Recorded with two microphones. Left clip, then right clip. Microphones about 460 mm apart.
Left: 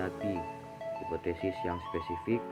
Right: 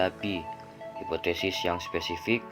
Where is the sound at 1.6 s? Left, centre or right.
Centre.